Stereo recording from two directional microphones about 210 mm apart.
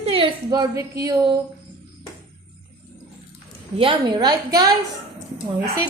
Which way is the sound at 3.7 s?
20° right (ahead or behind).